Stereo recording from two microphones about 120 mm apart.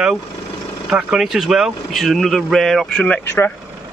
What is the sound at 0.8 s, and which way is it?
Speech, 5° right (ahead or behind).